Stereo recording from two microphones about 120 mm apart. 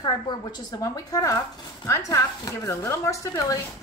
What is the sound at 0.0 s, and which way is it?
A woman's voice, 35° left (ahead or behind).